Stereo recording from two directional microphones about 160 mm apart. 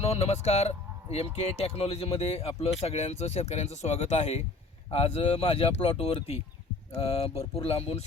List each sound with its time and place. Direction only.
0.0 s speech: 40° left (ahead or behind)